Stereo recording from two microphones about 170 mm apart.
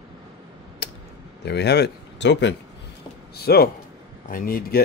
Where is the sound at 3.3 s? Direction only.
65° left (ahead or behind).